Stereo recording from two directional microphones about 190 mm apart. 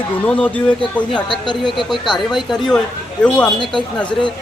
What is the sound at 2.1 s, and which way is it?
Speech, centre (ahead or behind).